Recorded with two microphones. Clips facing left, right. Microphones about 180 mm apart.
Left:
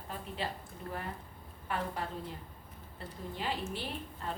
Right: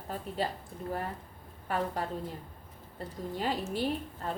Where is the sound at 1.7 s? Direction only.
40° right (ahead or behind).